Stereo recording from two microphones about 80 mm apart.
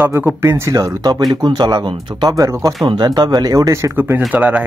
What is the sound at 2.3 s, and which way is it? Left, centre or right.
Speech, right.